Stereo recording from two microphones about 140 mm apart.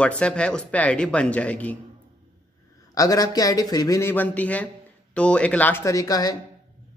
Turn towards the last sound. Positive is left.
turn(degrees=25)  # may be behind; listen again after turning